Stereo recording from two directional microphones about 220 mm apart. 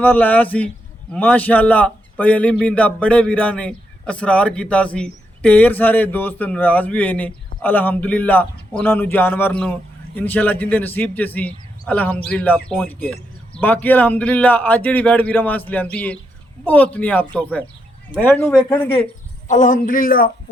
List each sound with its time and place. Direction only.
0.0 s a man's voice: 10° left (ahead or behind)
19.5 s speech: 35° left (ahead or behind)